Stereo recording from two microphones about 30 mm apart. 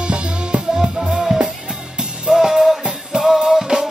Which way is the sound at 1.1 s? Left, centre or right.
Centre.